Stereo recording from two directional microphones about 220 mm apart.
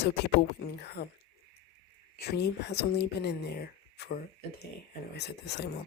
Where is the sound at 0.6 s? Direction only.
45° left (ahead or behind).